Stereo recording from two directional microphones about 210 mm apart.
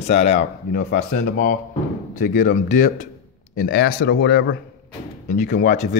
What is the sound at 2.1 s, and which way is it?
A man's voice, 40° left (ahead or behind).